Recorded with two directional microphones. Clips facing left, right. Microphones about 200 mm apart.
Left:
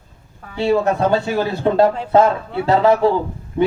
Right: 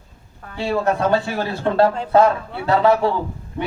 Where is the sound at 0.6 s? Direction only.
20° left (ahead or behind).